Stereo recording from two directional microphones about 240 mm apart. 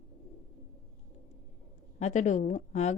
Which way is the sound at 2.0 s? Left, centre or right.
Left.